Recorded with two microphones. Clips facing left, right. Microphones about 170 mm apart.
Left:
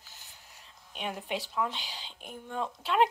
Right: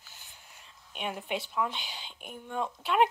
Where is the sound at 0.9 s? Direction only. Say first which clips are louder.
Right 1 dB; 35° left (ahead or behind).